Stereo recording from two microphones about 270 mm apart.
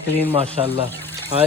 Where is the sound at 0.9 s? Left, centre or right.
Centre.